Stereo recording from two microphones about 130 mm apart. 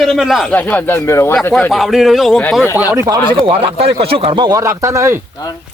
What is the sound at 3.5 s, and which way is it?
Speech, 50° right (ahead or behind).